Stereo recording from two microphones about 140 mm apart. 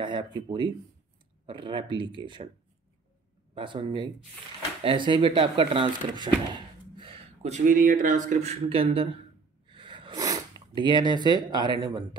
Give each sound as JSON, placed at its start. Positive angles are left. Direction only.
{"t": 0.0, "sound": "speech", "side_deg": -35}
{"t": 3.5, "sound": "speech", "side_deg": -35}
{"t": 7.4, "sound": "speech", "side_deg": -65}
{"t": 8.3, "sound": "speech", "side_deg": -50}
{"t": 9.7, "sound": "a sound", "side_deg": -35}